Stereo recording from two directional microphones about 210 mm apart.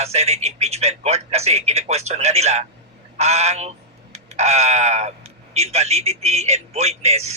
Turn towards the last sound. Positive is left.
turn(degrees=-30)  # may be behind; listen again after turning